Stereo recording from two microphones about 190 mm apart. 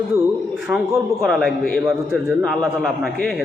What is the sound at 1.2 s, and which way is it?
A man's voice, centre (ahead or behind).